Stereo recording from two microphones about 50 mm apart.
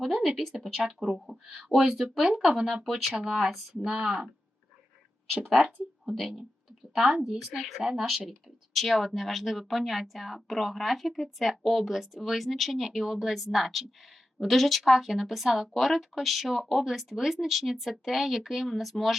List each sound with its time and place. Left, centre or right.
0.0 s speech: centre
1.0 s speech: right
1.5 s speech: centre
5.5 s speech: centre